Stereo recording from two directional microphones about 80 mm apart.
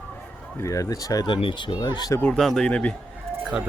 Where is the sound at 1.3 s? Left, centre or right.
Left.